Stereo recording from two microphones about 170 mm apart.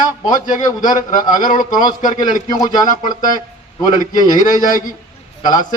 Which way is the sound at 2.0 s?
50° left (ahead or behind).